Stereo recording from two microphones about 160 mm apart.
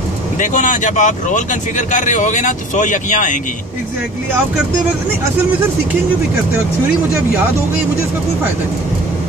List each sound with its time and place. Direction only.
0.4 s speech: 50° left (ahead or behind)